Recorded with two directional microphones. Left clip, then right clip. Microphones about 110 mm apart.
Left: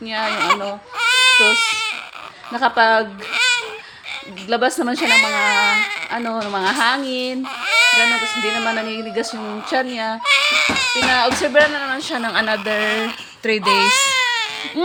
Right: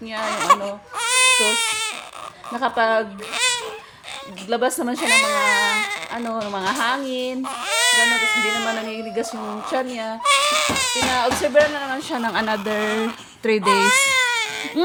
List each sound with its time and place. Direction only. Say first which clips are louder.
0.3 s speech: right 1 dB; 40° right (ahead or behind)
0.9 s baby cry: left 4 dB; 40° right (ahead or behind)
2.5 s speech: left 5 dB; 30° left (ahead or behind)
3.3 s a sound: left 5 dB; 40° right (ahead or behind)
4.4 s speech: left 3 dB; 30° left (ahead or behind)
4.9 s speech: left 2 dB; 40° right (ahead or behind)
6.3 s speech: left 3 dB; 35° left (ahead or behind)
7.4 s speech: left 6 dB; 45° right (ahead or behind)
9.2 s speech: left 1 dB; 35° left (ahead or behind)
10.2 s baby cry: left 2 dB; 35° right (ahead or behind)
11.6 s speech: left 2 dB; 10° left (ahead or behind)
11.9 s speech: left 3 dB; 20° right (ahead or behind); by 14.7 s 45° right (ahead or behind)